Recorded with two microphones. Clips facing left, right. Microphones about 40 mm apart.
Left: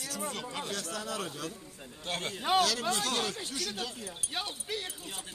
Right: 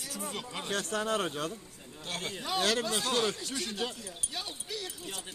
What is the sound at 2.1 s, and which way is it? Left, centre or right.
Speech, centre.